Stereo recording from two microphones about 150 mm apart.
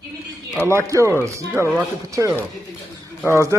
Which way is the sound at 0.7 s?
20° right (ahead or behind).